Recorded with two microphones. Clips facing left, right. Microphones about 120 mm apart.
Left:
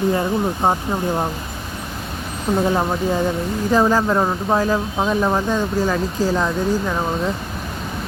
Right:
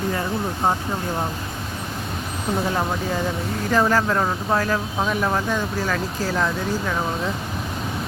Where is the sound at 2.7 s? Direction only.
20° left (ahead or behind).